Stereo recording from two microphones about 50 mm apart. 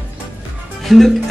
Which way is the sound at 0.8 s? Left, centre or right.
Centre.